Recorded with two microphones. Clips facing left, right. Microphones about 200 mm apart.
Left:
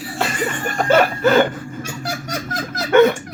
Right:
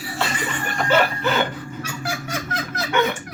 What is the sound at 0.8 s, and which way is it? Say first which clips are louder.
Laughter: left 4 dB; 45° left (ahead or behind).